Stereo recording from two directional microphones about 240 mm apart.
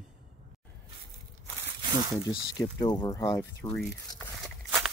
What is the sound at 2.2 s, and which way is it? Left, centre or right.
Speech, centre.